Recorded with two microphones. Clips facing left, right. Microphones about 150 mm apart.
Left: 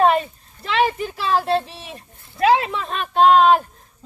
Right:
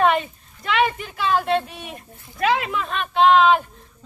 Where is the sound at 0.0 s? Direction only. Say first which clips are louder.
Left 2 dB; 35° left (ahead or behind).